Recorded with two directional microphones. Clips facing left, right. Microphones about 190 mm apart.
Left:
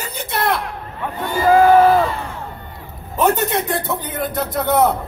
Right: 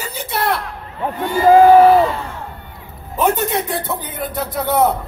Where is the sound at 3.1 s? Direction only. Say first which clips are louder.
Even; 10° right (ahead or behind).